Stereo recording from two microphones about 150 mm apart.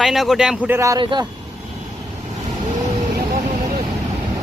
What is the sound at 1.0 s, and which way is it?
Speech, 30° right (ahead or behind).